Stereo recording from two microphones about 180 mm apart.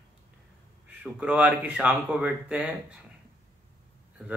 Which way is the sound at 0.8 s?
5° right (ahead or behind).